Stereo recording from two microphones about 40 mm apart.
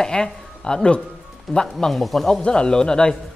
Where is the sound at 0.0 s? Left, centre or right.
Centre.